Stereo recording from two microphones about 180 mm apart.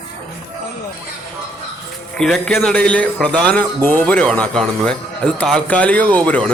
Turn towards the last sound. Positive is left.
turn(degrees=10)  # may be behind; listen again after turning